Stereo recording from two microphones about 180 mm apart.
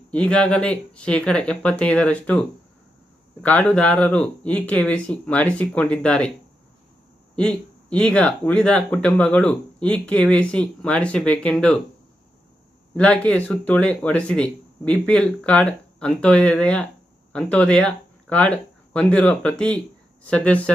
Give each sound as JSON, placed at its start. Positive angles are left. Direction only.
{"t": 0.1, "sound": "speech", "side_deg": 5}
{"t": 3.4, "sound": "speech", "side_deg": 10}
{"t": 7.3, "sound": "speech", "side_deg": 5}
{"t": 13.0, "sound": "speech", "side_deg": 5}